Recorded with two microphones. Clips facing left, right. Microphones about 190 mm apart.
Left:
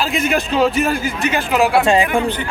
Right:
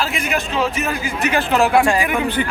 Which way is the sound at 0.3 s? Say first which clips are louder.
Left 7 dB; 35° left (ahead or behind).